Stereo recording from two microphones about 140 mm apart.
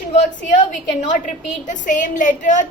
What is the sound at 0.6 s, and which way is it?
A woman's voice, 65° left (ahead or behind).